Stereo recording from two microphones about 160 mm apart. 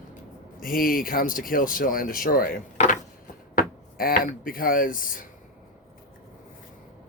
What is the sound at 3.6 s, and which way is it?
Speech, 60° left (ahead or behind).